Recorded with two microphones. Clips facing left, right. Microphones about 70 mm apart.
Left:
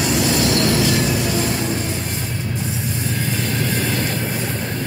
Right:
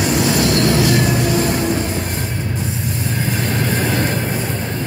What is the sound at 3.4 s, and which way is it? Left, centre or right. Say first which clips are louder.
Train: right 4 dB; right.